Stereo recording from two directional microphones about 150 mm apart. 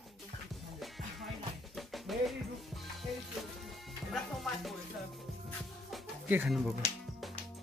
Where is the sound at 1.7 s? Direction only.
Centre (ahead or behind).